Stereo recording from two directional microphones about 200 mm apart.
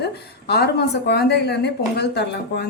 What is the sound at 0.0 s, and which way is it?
A woman's voice, 55° left (ahead or behind).